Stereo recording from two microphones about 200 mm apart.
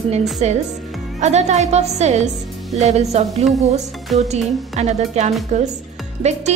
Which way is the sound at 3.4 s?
Centre (ahead or behind).